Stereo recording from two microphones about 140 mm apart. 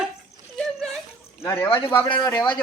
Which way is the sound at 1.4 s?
15° left (ahead or behind).